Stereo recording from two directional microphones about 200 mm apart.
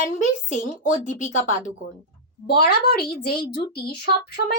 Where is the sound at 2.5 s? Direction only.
50° left (ahead or behind).